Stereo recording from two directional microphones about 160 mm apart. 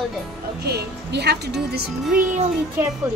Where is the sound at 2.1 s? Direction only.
55° right (ahead or behind).